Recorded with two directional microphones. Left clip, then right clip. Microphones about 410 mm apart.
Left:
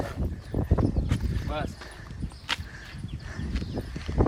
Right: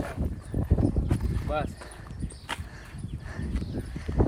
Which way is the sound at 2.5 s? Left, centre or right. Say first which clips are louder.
Left 5 dB; centre.